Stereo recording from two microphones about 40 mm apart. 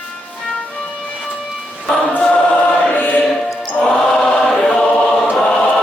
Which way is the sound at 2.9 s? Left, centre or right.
Left.